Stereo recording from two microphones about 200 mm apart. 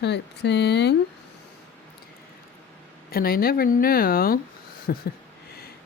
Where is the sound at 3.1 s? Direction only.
50° left (ahead or behind).